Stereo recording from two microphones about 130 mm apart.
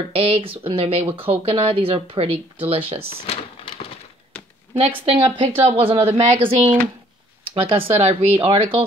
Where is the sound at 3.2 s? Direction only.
50° left (ahead or behind).